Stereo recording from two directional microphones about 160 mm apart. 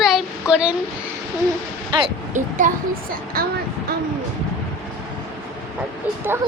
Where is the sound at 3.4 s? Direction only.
65° right (ahead or behind).